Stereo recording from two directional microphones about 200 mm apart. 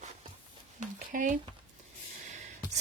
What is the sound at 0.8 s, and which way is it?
Speech, 40° right (ahead or behind).